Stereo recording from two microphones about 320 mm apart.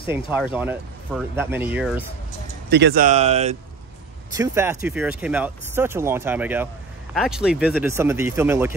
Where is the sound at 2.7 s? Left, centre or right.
Right.